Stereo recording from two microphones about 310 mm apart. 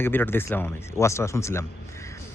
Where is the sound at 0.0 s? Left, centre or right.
Centre.